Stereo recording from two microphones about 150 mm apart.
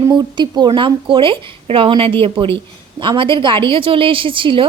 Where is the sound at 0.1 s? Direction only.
30° right (ahead or behind).